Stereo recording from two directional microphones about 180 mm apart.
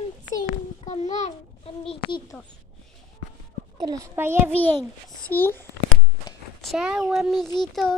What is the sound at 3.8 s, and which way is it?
Speech, 20° right (ahead or behind).